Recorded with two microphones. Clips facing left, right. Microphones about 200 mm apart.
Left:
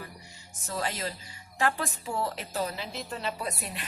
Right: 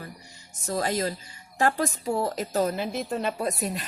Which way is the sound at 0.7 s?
40° right (ahead or behind).